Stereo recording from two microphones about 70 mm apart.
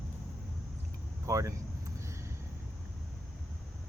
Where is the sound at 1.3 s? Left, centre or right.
Right.